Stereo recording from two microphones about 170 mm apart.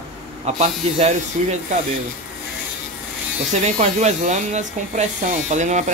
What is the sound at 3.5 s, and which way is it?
Speech, 45° right (ahead or behind).